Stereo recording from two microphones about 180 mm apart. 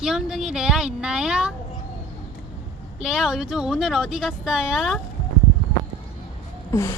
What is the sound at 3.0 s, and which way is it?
Speech, centre (ahead or behind).